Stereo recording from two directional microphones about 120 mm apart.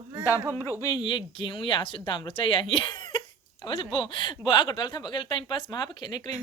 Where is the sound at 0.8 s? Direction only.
35° left (ahead or behind).